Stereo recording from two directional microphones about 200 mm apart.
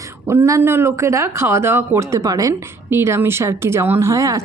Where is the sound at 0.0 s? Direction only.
15° right (ahead or behind).